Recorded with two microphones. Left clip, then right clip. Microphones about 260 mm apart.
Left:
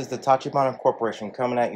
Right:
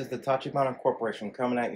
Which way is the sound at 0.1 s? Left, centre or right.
Centre.